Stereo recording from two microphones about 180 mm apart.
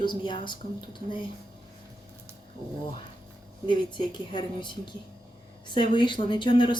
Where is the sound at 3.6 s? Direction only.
25° left (ahead or behind).